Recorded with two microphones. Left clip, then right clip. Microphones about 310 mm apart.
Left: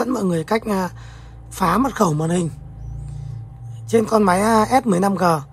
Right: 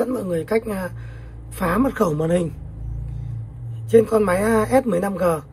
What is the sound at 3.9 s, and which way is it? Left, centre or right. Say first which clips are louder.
Speech: even; centre.